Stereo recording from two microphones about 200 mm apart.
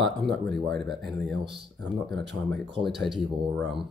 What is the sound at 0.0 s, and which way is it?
Speech, centre (ahead or behind).